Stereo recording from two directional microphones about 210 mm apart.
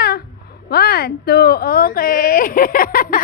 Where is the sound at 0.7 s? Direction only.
50° left (ahead or behind).